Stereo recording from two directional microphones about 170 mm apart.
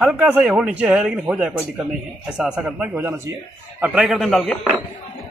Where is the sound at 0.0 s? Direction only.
10° right (ahead or behind).